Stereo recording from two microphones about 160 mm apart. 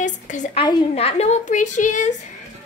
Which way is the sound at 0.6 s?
35° left (ahead or behind).